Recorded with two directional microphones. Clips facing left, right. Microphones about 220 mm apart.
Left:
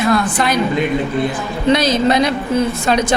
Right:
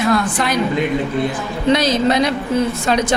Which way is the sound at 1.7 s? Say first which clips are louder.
Left 1 dB; 10° left (ahead or behind).